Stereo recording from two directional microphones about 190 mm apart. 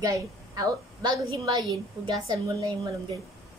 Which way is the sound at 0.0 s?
20° right (ahead or behind).